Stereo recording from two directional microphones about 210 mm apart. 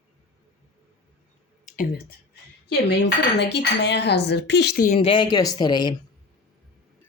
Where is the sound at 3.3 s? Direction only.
55° left (ahead or behind).